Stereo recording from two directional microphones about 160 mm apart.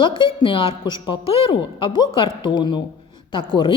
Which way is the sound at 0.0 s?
30° left (ahead or behind).